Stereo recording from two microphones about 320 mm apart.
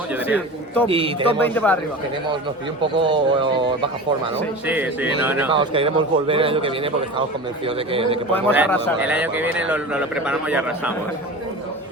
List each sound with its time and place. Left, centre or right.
0.1 s a man's voice: centre
0.9 s speech: centre
1.5 s a man's voice: centre
3.0 s speech: centre
4.6 s a man's voice: centre
5.5 s speech: centre
8.3 s a man's voice: centre
9.0 s a man's voice: centre